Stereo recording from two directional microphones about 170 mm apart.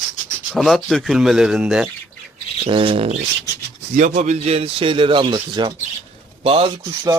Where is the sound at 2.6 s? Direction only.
30° right (ahead or behind).